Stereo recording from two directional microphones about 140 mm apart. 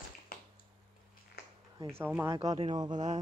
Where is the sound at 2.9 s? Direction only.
60° right (ahead or behind).